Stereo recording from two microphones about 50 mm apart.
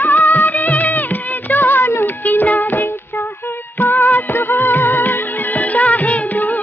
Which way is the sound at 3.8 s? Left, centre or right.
Left.